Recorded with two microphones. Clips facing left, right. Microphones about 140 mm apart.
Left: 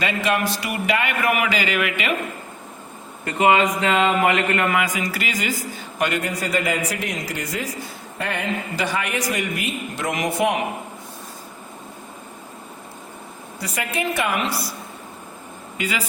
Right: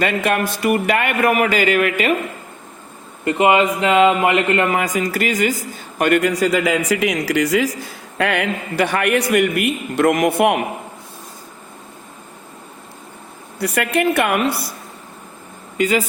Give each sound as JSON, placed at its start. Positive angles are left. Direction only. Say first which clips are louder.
{"t": 0.0, "sound": "a man's voice", "louder": "right 3 dB", "side_deg": -50}
{"t": 3.2, "sound": "a man's voice", "louder": "right 3 dB", "side_deg": -25}
{"t": 4.8, "sound": "a man's voice", "louder": "right 5 dB", "side_deg": -45}
{"t": 8.2, "sound": "a man's voice", "louder": "right 6 dB", "side_deg": -75}
{"t": 13.6, "sound": "a man's voice", "louder": "right 8 dB", "side_deg": -65}
{"t": 15.8, "sound": "a man's voice", "louder": "right 9 dB", "side_deg": -45}